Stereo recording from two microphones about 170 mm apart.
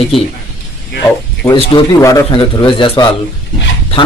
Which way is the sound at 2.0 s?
20° left (ahead or behind).